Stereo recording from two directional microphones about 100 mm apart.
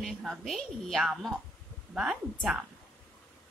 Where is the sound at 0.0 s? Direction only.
Centre (ahead or behind).